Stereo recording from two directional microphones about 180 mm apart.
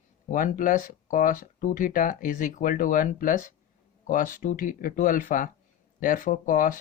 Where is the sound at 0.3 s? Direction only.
45° left (ahead or behind).